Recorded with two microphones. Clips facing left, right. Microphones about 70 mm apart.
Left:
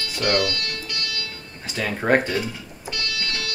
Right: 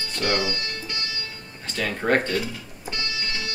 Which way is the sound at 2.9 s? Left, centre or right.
Right.